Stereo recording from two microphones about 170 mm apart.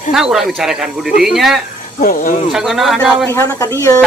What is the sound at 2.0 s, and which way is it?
Speech, 50° left (ahead or behind).